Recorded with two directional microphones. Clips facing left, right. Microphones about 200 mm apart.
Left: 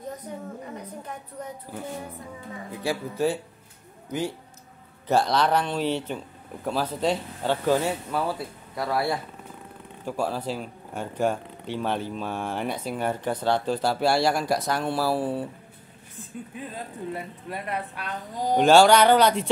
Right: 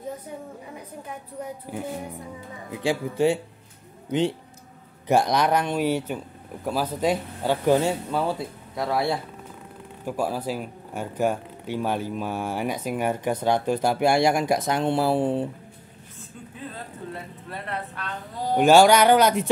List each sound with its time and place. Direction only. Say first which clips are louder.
0.3 s speech: left 2 dB; 10° right (ahead or behind)
10.0 s speech: right 1 dB; 10° right (ahead or behind)
17.1 s a man's voice: left 3 dB; 10° left (ahead or behind)
18.6 s speech: right 1 dB; 10° right (ahead or behind)